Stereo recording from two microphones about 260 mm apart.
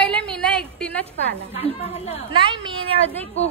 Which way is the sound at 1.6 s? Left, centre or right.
Left.